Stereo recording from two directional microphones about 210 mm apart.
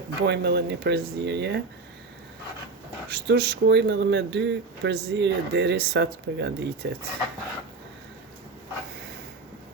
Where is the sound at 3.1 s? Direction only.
50° right (ahead or behind).